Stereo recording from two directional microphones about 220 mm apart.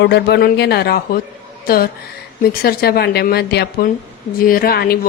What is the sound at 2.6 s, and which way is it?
Speech, 45° left (ahead or behind).